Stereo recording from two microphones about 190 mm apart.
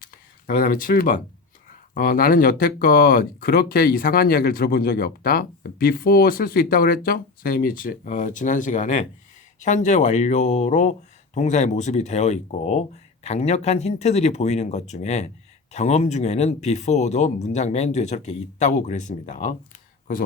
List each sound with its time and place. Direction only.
0.4 s speech: 50° left (ahead or behind)